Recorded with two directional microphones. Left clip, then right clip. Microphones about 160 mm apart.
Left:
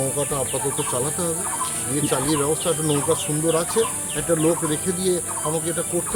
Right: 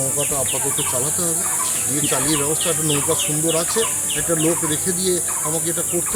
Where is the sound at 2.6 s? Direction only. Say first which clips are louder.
Right 1 dB; 20° left (ahead or behind).